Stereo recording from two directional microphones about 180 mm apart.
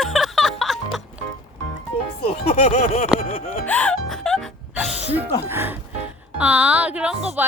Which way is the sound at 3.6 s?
5° left (ahead or behind).